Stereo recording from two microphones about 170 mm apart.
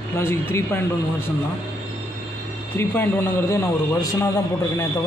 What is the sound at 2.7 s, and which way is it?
A man's voice, 10° left (ahead or behind).